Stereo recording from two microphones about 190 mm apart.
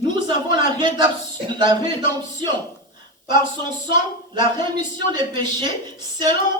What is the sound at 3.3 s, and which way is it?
Speech, 25° right (ahead or behind).